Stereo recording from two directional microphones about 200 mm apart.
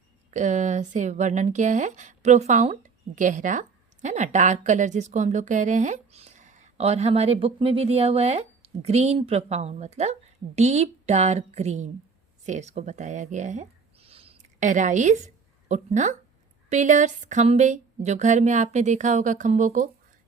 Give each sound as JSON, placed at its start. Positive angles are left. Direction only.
{"t": 0.3, "sound": "speech", "side_deg": -35}